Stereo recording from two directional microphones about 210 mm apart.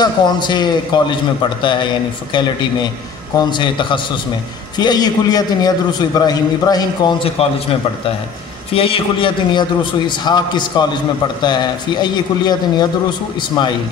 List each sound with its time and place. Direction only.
0.0 s a man's voice: 20° left (ahead or behind)
3.3 s a man's voice: 20° left (ahead or behind)
8.7 s a man's voice: 25° left (ahead or behind)